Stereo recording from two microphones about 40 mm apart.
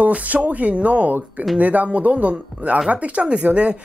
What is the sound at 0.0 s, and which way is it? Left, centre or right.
Speech, right.